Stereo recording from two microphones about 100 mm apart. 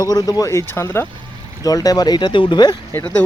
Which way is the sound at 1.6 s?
40° left (ahead or behind).